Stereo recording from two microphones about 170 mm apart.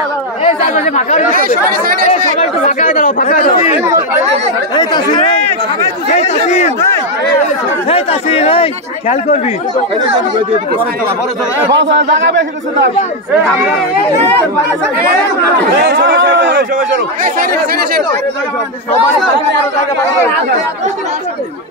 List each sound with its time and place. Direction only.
0.6 s speech: 45° left (ahead or behind)
1.3 s speech: 60° right (ahead or behind)
2.0 s speech: 40° left (ahead or behind)
4.7 s speech: 25° left (ahead or behind)
6.1 s a man's voice: 40° left (ahead or behind)
7.9 s a man's voice: 35° left (ahead or behind)
11.7 s a man's voice: 90° right
15.8 s a man's voice: 90° right
16.7 s speech: 55° right (ahead or behind)